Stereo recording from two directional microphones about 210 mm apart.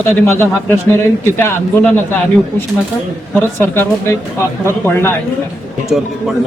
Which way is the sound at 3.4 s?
10° left (ahead or behind).